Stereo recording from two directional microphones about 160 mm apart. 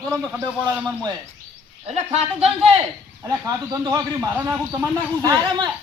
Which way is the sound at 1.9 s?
40° right (ahead or behind).